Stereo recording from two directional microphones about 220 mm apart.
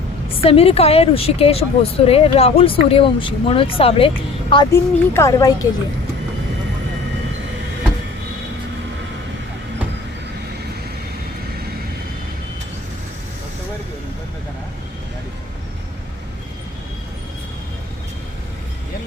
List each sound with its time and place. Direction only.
0.4 s speech: 25° left (ahead or behind)
4.7 s speech: 10° left (ahead or behind)